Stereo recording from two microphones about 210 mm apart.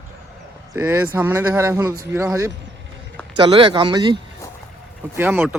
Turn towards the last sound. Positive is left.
turn(degrees=-10)  # may be behind; listen again after turning